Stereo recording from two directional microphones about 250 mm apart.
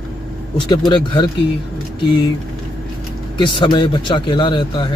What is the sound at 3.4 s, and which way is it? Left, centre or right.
Speech, centre.